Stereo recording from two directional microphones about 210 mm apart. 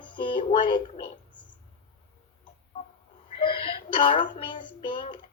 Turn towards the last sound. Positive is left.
turn(degrees=25)  # may be behind; listen again after turning